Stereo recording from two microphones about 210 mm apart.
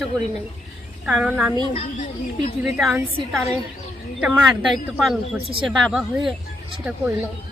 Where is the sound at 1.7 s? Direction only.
35° left (ahead or behind).